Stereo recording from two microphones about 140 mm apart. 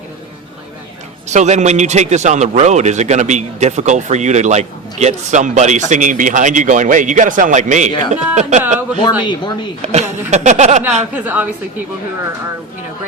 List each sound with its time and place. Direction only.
1.3 s a man's voice: 55° right (ahead or behind)
9.0 s speech: 35° left (ahead or behind)
9.8 s a man's voice: 50° right (ahead or behind)
11.1 s a woman's voice: 10° right (ahead or behind)